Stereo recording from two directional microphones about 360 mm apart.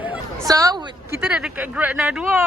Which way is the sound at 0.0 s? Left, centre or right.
Centre.